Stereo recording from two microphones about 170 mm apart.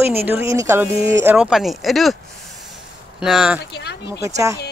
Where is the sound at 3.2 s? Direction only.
5° right (ahead or behind).